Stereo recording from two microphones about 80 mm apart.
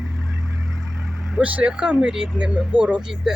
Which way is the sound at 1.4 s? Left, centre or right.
Centre.